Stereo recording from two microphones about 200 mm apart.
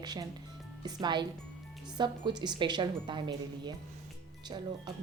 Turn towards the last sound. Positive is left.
turn(degrees=-20)  # may be behind; listen again after turning